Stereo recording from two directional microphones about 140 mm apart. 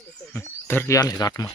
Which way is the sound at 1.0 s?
25° left (ahead or behind).